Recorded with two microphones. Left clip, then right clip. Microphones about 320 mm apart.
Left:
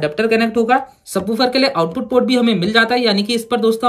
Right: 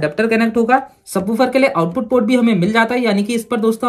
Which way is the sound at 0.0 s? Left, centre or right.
Centre.